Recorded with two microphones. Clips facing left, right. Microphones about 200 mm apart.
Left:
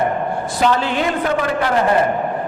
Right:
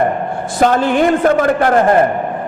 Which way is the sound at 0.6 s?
50° right (ahead or behind).